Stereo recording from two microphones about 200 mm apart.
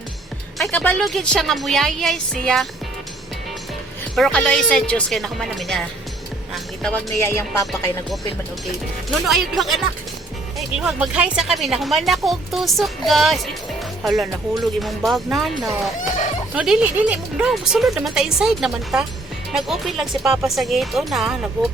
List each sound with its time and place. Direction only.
0.6 s speech: 5° left (ahead or behind)
4.1 s speech: 5° left (ahead or behind)
7.2 s speech: 15° left (ahead or behind)
9.2 s speech: centre (ahead or behind)
16.0 s a sound: 40° left (ahead or behind)
16.6 s speech: 5° right (ahead or behind)